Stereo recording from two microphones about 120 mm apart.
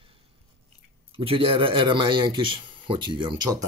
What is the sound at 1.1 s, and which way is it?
Speech, 50° right (ahead or behind).